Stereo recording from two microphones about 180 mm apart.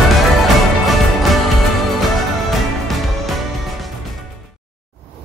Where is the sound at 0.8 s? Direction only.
Centre (ahead or behind).